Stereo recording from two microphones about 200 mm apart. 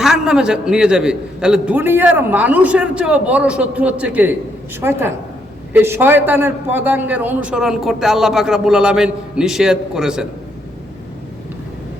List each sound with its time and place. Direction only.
0.0 s a man's voice: 5° right (ahead or behind)